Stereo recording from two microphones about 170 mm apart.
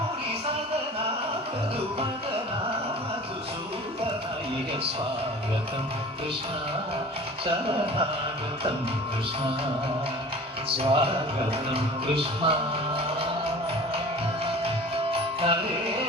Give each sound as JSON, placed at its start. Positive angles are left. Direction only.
{"t": 10.8, "sound": "music", "side_deg": -35}
{"t": 15.1, "sound": "music", "side_deg": -35}